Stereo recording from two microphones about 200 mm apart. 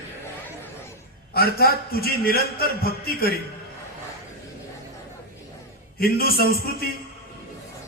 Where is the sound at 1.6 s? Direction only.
50° left (ahead or behind).